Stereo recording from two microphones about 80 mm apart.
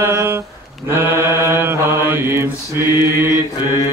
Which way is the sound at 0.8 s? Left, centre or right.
Right.